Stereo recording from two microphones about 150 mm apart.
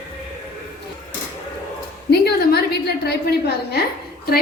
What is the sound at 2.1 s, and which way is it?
A woman's voice, 90° left.